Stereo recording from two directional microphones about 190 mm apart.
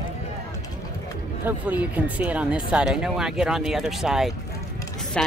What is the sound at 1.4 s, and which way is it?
Speech, 10° right (ahead or behind).